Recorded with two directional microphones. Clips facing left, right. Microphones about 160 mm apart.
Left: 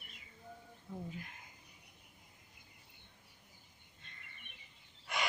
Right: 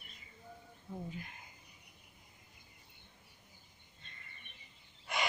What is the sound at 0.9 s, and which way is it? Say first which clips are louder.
Speech: right 1 dB; 5° right (ahead or behind).